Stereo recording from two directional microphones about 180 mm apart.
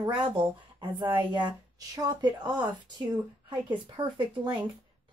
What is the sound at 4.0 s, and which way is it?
Speech, 25° right (ahead or behind).